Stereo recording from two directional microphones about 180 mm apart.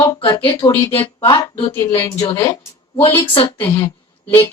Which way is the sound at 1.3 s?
25° left (ahead or behind).